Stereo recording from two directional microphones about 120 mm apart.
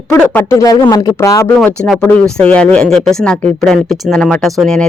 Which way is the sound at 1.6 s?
5° left (ahead or behind).